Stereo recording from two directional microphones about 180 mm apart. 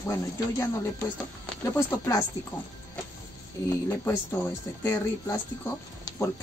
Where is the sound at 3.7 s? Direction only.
10° left (ahead or behind).